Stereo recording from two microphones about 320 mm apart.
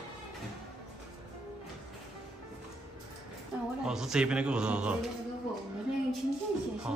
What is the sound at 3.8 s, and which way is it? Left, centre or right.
A man's voice, centre.